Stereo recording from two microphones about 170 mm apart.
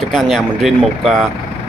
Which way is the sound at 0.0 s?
Centre (ahead or behind).